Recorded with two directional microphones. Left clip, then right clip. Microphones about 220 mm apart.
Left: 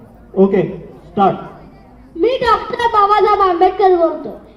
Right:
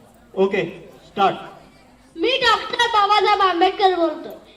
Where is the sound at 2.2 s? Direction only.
35° left (ahead or behind).